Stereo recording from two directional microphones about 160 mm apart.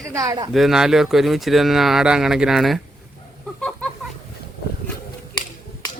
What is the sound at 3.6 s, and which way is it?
Chicken, 5° left (ahead or behind).